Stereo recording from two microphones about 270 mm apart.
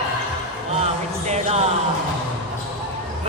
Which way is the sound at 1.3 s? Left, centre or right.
Right.